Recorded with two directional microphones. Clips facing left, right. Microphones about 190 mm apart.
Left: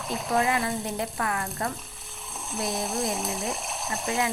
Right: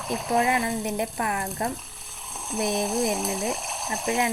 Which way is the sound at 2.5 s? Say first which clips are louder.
Right 4 dB; centre (ahead or behind).